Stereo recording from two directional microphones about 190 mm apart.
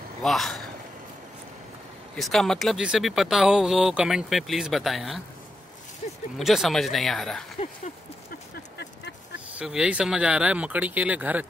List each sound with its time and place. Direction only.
0.2 s speech: centre (ahead or behind)
2.1 s speech: centre (ahead or behind)
6.0 s a sound: 40° left (ahead or behind)
6.3 s speech: centre (ahead or behind)
8.3 s a sound: 65° left (ahead or behind)
9.6 s speech: 5° right (ahead or behind)